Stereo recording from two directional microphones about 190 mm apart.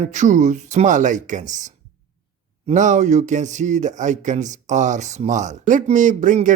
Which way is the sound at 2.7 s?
40° right (ahead or behind).